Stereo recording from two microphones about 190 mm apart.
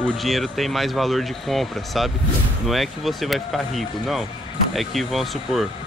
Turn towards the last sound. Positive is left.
turn(degrees=0)  # may be behind; listen again after turning